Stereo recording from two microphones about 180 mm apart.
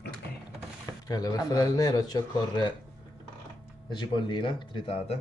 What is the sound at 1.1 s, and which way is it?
Speech, 20° left (ahead or behind).